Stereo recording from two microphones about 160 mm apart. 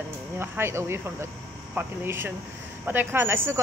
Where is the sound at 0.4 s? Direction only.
15° right (ahead or behind).